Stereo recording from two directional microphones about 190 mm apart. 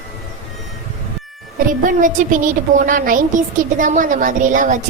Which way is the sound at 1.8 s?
45° right (ahead or behind).